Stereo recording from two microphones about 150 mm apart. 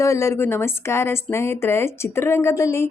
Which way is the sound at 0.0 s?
20° left (ahead or behind).